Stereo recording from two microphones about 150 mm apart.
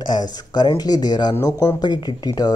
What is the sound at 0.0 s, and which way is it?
Speech, 30° left (ahead or behind).